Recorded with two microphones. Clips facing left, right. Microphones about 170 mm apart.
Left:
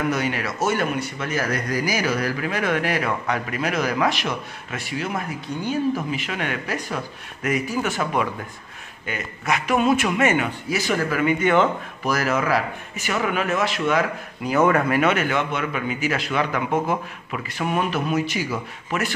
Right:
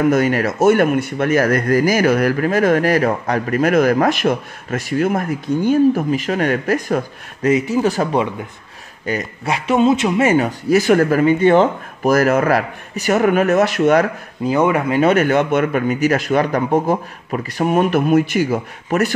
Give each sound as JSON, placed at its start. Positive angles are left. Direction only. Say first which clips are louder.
{"t": 0.1, "sound": "speech", "louder": "right 9 dB", "side_deg": -45}
{"t": 7.7, "sound": "speech", "louder": "right 7 dB", "side_deg": -35}
{"t": 10.7, "sound": "speech", "louder": "right 12 dB", "side_deg": -55}
{"t": 11.1, "sound": "speech", "louder": "right 7 dB", "side_deg": -30}
{"t": 12.1, "sound": "speech", "louder": "right 8 dB", "side_deg": -50}
{"t": 12.9, "sound": "speech", "louder": "right 10 dB", "side_deg": -40}
{"t": 14.4, "sound": "speech", "louder": "right 3 dB", "side_deg": -30}
{"t": 14.7, "sound": "speech", "louder": "right 2 dB", "side_deg": -15}
{"t": 15.0, "sound": "speech", "louder": "right 7 dB", "side_deg": -40}